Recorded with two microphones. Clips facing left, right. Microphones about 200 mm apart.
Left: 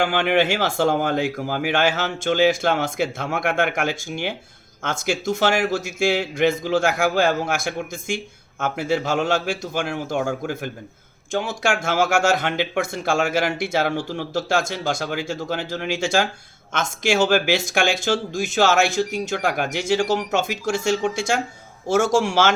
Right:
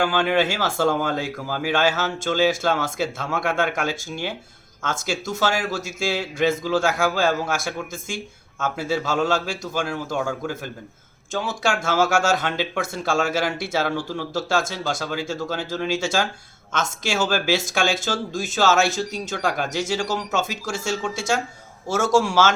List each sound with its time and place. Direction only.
0.1 s speech: 15° left (ahead or behind)
11.3 s speech: 15° left (ahead or behind)